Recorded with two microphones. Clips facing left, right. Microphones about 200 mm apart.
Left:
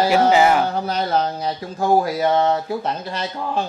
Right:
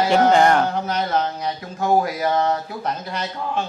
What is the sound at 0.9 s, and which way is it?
A man's voice, 30° left (ahead or behind).